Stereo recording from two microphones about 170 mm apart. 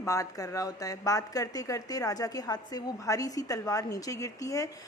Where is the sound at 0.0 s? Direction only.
20° left (ahead or behind).